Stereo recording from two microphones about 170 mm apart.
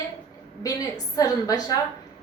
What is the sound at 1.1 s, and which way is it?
Speech, 20° left (ahead or behind).